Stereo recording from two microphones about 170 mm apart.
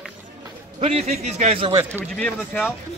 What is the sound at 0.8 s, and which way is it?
Speech, 40° right (ahead or behind).